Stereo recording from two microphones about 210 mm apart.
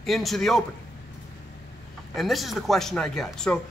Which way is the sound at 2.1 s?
Centre (ahead or behind).